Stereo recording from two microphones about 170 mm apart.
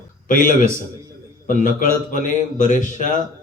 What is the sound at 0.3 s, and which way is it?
Speech, 55° left (ahead or behind).